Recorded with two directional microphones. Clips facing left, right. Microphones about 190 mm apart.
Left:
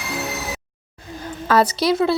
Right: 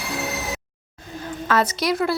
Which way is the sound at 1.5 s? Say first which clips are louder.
Left 4 dB; 35° left (ahead or behind).